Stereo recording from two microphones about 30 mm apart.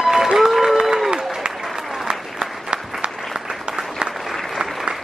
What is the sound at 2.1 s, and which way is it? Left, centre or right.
Applause, right.